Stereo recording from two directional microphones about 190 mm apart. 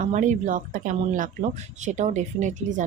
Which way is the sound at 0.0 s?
40° right (ahead or behind).